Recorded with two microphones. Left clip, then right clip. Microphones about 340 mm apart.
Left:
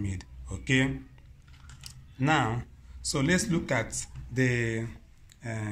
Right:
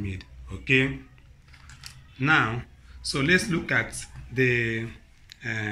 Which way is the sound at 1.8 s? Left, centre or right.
Left.